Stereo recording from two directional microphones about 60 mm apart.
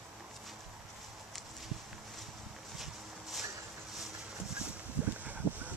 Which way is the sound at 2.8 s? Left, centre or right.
Centre.